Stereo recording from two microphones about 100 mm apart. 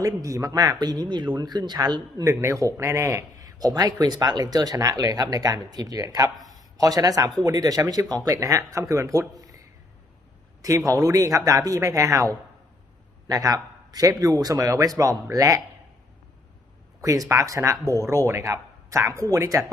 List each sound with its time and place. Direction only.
0.0 s a man's voice: 35° right (ahead or behind)
2.3 s a man's voice: 25° right (ahead or behind)
6.5 s a sound: 40° right (ahead or behind)
7.3 s a man's voice: 40° right (ahead or behind)
10.6 s a man's voice: 35° right (ahead or behind)
17.0 s a man's voice: 35° right (ahead or behind)